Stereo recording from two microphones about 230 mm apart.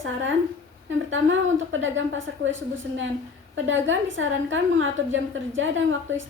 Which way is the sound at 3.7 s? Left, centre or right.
Right.